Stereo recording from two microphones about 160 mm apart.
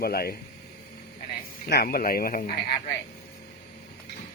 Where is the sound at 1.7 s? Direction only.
75° left (ahead or behind).